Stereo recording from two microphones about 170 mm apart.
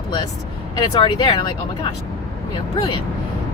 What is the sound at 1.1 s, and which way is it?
Speech, 30° left (ahead or behind).